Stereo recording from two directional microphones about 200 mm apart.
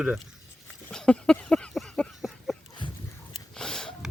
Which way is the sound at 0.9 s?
5° left (ahead or behind).